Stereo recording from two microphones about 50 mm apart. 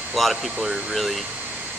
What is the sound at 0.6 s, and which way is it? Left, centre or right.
Speech, right.